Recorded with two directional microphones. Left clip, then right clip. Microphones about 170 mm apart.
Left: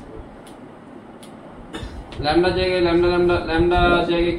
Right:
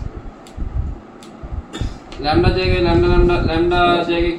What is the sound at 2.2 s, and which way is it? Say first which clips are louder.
A man's voice: right 1 dB; 15° left (ahead or behind).